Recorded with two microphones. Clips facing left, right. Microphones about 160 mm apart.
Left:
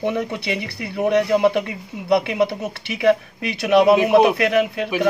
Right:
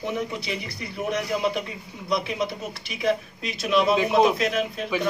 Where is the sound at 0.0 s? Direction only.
65° left (ahead or behind).